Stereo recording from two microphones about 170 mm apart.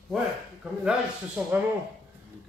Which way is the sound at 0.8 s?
5° right (ahead or behind).